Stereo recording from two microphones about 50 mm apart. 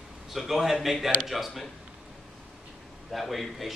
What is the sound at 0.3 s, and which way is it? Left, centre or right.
A man's voice, centre.